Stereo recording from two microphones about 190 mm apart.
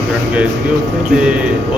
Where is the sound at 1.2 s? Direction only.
5° right (ahead or behind).